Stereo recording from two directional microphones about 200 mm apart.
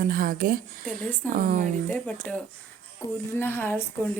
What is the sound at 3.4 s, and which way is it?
Speech, 10° left (ahead or behind).